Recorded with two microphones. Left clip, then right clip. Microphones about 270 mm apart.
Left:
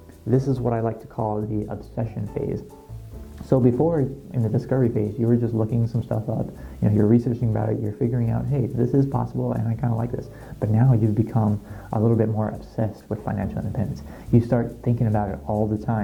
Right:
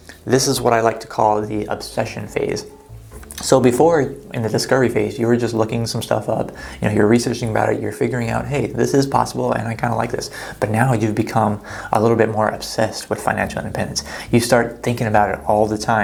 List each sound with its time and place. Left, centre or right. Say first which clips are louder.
0.3 s speech: right 8 dB; centre
6.1 s speech: right 9 dB; centre